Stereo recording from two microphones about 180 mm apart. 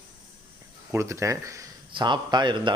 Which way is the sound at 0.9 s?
15° right (ahead or behind).